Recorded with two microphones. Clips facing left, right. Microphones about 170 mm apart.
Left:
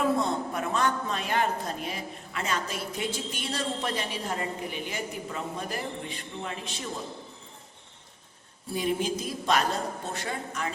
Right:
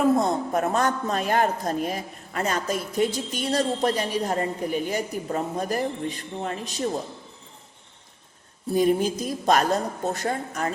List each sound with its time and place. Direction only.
0.2 s a woman's voice: 45° right (ahead or behind)
8.7 s a woman's voice: 45° right (ahead or behind)